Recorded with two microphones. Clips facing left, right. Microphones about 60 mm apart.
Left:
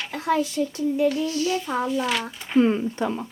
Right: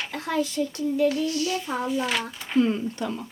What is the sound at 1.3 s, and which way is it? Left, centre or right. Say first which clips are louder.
Speech: left 2 dB; left.